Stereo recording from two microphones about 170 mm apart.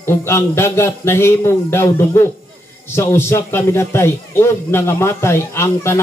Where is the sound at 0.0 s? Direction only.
15° left (ahead or behind).